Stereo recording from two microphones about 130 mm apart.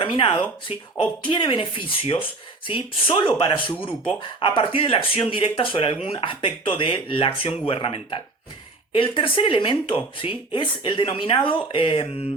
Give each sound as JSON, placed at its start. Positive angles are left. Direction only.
{"t": 0.0, "sound": "speech", "side_deg": 40}